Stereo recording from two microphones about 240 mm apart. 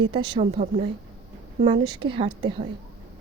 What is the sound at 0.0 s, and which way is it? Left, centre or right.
A woman's voice, centre.